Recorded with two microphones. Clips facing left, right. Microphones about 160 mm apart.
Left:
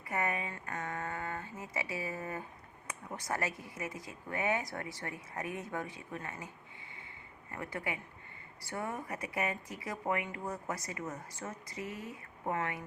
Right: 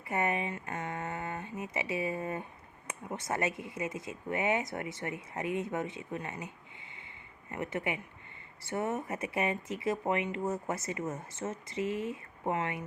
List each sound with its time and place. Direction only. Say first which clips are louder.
0.1 s speech: right 4 dB; 25° right (ahead or behind)
7.5 s speech: right 5 dB; 20° right (ahead or behind)